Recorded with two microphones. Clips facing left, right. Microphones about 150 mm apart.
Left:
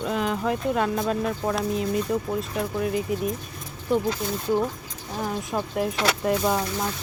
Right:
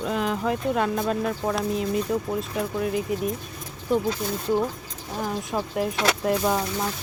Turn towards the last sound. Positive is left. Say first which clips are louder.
# even
turn(degrees=0)  # may be behind; listen again after turning